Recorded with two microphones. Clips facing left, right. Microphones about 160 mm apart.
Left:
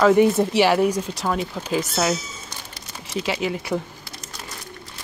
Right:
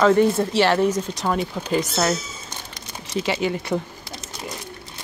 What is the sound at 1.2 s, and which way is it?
Speech, centre (ahead or behind).